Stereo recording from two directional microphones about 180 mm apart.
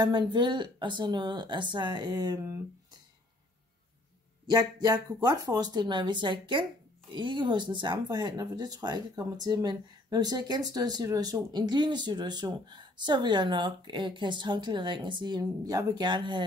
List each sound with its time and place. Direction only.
0.0 s speech: 25° right (ahead or behind)
4.5 s speech: 20° right (ahead or behind)